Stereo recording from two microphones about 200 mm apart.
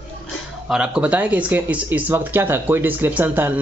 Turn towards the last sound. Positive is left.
turn(degrees=-10)  # may be behind; listen again after turning